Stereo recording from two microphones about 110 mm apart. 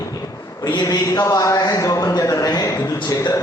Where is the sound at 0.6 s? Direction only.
40° left (ahead or behind).